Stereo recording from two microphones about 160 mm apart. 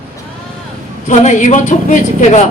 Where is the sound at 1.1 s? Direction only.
50° left (ahead or behind).